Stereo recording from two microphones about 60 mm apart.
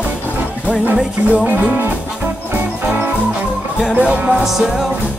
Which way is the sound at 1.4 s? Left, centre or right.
Right.